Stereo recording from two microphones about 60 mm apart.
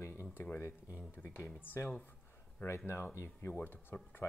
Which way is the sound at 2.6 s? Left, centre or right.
Left.